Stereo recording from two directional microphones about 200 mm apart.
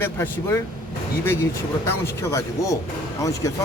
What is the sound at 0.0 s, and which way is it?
Speech, 10° left (ahead or behind).